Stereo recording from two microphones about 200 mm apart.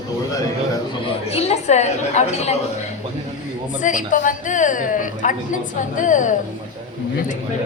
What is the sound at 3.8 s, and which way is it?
A woman's voice, 40° left (ahead or behind).